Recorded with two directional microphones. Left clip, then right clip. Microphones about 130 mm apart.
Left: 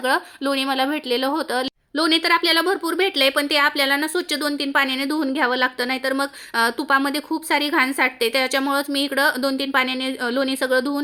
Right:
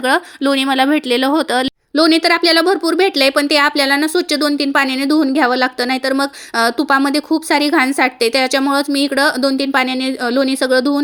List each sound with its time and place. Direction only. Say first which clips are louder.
0.1 s speech: right 8 dB; 40° right (ahead or behind)
2.0 s a woman's voice: right 6 dB; 25° right (ahead or behind)